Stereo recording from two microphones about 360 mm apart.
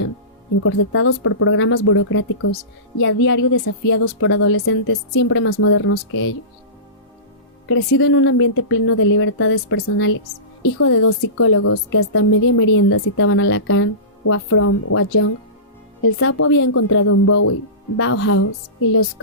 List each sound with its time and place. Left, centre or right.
0.6 s a woman's voice: left
7.7 s a woman's voice: left